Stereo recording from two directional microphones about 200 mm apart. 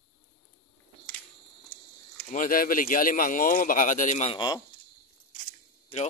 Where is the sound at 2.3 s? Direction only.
45° left (ahead or behind).